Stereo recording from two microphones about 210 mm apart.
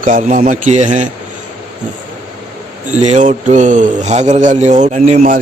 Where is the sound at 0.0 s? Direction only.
40° right (ahead or behind).